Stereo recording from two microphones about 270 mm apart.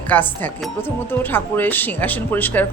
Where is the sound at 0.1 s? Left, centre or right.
Centre.